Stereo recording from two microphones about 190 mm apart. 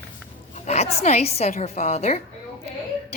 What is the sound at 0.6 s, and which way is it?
A woman's voice, 35° left (ahead or behind).